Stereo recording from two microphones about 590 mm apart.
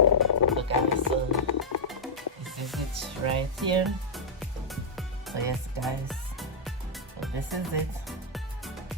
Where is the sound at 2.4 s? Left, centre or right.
Centre.